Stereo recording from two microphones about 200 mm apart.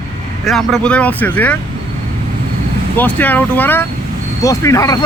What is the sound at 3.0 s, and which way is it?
Speech, 10° left (ahead or behind).